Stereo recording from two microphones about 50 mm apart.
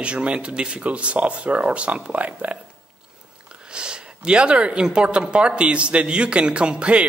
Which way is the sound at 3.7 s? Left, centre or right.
Centre.